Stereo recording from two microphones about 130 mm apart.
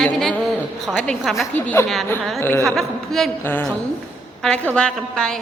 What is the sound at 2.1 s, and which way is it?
Speech, 15° left (ahead or behind).